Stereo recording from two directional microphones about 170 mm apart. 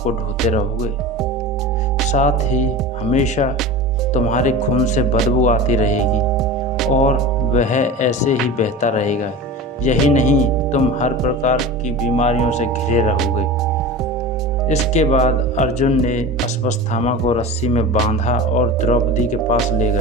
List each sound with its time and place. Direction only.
2.1 s speech: 45° left (ahead or behind)
6.3 s music: centre (ahead or behind)
6.9 s speech: 45° left (ahead or behind)
14.7 s speech: 40° left (ahead or behind)